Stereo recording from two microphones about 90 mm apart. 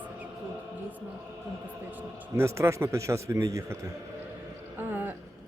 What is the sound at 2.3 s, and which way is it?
A man's voice, 30° right (ahead or behind).